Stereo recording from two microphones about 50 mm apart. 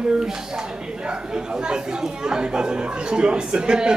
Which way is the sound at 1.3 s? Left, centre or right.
Centre.